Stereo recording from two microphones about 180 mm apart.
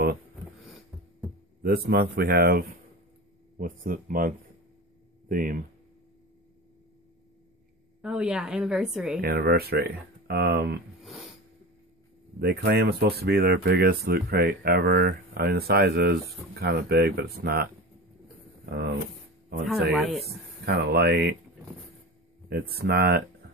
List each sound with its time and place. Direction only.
1.6 s speech: 60° right (ahead or behind)
8.0 s a woman's voice: 5° right (ahead or behind)
9.2 s speech: 60° right (ahead or behind)
12.4 s speech: 60° right (ahead or behind)
18.7 s speech: 65° right (ahead or behind)
19.7 s a woman's voice: centre (ahead or behind)
20.6 s speech: 65° right (ahead or behind)
22.5 s speech: 60° right (ahead or behind)